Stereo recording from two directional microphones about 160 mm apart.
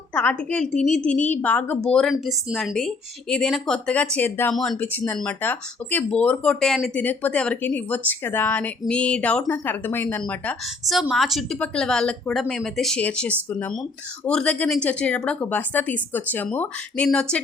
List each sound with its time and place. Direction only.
0.1 s a woman's voice: 10° left (ahead or behind)